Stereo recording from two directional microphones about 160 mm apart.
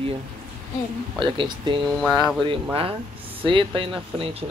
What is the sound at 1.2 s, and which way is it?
Speech, 30° right (ahead or behind).